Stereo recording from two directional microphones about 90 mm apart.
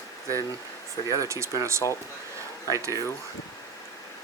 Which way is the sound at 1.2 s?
30° right (ahead or behind).